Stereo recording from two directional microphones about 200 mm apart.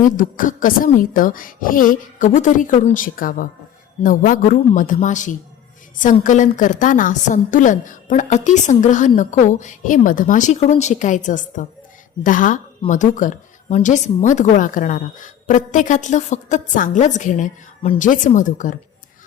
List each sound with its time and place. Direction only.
0.2 s a woman's voice: 40° left (ahead or behind)